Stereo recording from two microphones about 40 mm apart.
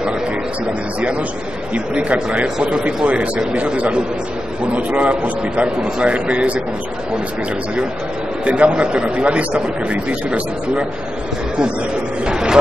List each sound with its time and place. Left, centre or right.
1.7 s a man's voice: right
8.5 s a man's voice: right
12.3 s a man's voice: centre